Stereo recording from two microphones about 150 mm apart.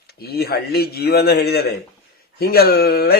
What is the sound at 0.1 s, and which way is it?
Speech, 90° left.